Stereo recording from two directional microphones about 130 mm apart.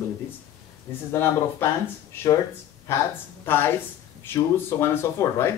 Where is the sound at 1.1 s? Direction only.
20° left (ahead or behind).